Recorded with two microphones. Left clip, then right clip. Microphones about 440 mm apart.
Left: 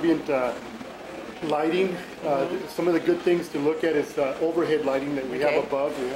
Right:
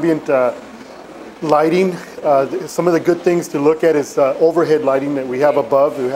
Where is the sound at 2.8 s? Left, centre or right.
Right.